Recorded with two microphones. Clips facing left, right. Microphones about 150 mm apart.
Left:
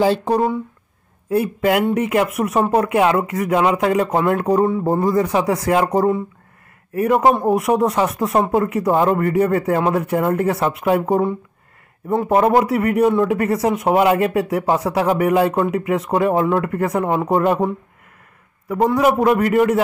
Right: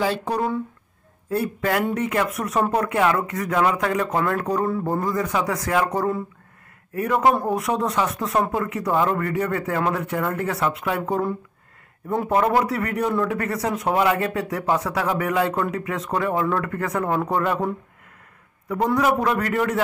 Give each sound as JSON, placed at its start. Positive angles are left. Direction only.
{"t": 0.0, "sound": "speech", "side_deg": 30}
{"t": 1.3, "sound": "speech", "side_deg": 20}
{"t": 4.6, "sound": "speech", "side_deg": 20}
{"t": 5.0, "sound": "speech", "side_deg": 30}
{"t": 12.4, "sound": "speech", "side_deg": 25}
{"t": 18.9, "sound": "speech", "side_deg": 20}